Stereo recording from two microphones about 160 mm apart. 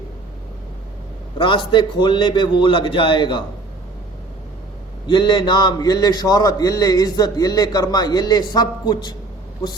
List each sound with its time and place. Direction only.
1.4 s a man's voice: 30° left (ahead or behind)
5.0 s a man's voice: 30° left (ahead or behind)